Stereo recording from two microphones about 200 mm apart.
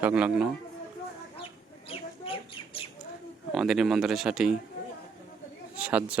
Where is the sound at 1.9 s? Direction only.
25° left (ahead or behind).